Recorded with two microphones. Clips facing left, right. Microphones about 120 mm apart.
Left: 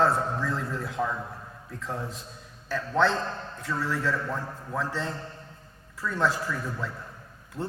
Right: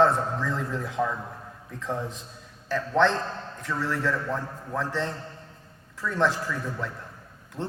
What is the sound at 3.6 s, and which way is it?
A man's voice, 10° left (ahead or behind).